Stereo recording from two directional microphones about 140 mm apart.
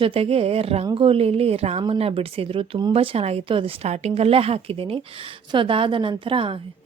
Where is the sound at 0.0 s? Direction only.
40° right (ahead or behind).